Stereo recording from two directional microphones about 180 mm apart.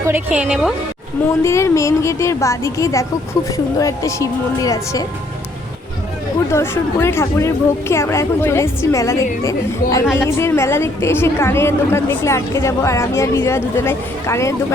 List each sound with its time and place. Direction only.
0.0 s a woman's voice: 10° right (ahead or behind)
1.4 s a woman's voice: 15° left (ahead or behind)
6.5 s a woman's voice: 15° left (ahead or behind)